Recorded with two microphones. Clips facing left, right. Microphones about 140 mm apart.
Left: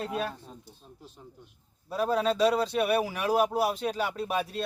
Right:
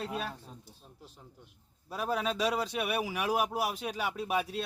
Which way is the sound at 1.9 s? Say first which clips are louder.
Left 6 dB; 10° right (ahead or behind).